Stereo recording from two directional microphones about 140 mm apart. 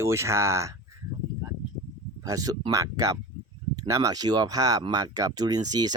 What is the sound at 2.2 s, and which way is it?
Speech, 25° right (ahead or behind).